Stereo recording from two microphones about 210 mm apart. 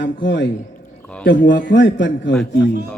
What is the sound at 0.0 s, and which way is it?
Speech, 60° left (ahead or behind).